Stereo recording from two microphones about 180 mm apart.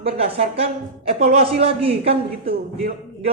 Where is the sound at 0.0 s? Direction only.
30° right (ahead or behind).